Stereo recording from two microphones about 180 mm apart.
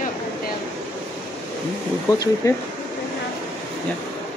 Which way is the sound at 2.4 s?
15° left (ahead or behind).